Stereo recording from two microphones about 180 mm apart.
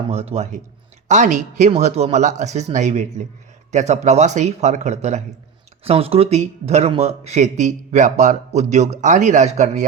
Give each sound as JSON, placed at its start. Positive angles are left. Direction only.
{"t": 0.1, "sound": "speech", "side_deg": -35}